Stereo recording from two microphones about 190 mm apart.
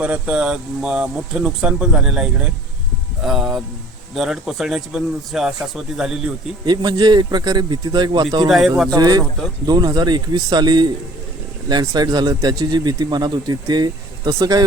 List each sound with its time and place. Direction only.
0.0 s speech: 5° right (ahead or behind)
6.7 s speech: 20° right (ahead or behind)
8.4 s speech: centre (ahead or behind)
8.9 s speech: 20° right (ahead or behind)